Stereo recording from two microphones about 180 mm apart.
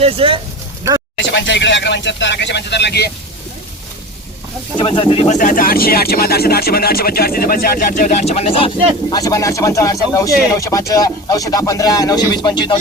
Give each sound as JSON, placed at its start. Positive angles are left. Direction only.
{"t": 0.0, "sound": "speech", "side_deg": -30}
{"t": 1.2, "sound": "speech", "side_deg": 85}
{"t": 4.8, "sound": "speech", "side_deg": 30}
{"t": 8.3, "sound": "speech", "side_deg": 35}